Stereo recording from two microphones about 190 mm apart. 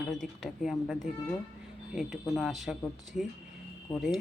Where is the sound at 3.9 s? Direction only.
20° left (ahead or behind).